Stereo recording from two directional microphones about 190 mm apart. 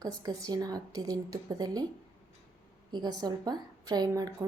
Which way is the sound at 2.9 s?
20° right (ahead or behind).